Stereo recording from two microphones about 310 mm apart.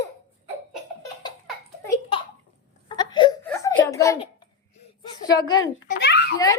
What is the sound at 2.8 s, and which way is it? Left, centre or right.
Wail, centre.